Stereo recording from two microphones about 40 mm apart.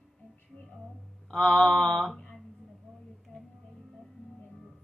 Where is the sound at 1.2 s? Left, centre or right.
Left.